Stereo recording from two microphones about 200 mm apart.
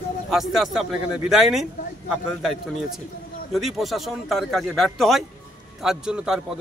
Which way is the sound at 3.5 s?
Centre (ahead or behind).